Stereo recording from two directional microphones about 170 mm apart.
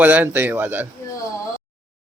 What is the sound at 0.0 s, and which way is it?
Speech, 10° right (ahead or behind).